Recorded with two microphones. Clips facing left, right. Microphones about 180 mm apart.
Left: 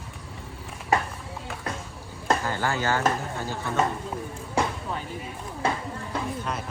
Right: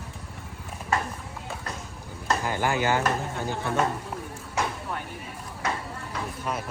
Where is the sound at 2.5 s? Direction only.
15° right (ahead or behind).